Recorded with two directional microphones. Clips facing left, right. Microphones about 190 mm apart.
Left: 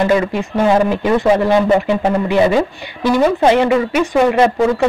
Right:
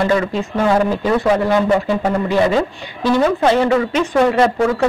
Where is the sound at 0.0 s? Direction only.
15° left (ahead or behind).